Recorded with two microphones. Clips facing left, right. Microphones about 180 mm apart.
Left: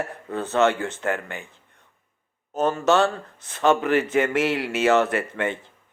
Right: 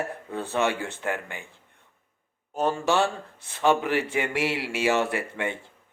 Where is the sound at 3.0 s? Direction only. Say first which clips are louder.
Left 3 dB; 65° left (ahead or behind).